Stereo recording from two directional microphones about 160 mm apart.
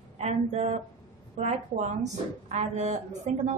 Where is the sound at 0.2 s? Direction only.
40° right (ahead or behind).